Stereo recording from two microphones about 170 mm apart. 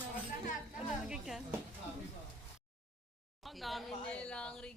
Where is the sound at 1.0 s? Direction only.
5° right (ahead or behind).